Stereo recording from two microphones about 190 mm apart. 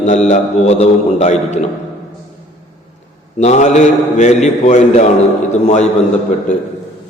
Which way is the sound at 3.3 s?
40° left (ahead or behind).